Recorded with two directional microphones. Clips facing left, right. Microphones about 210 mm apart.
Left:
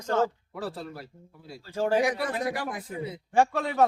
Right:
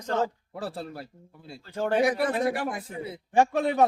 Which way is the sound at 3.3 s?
15° right (ahead or behind).